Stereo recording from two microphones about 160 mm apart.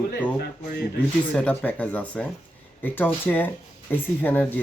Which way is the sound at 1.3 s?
5° left (ahead or behind).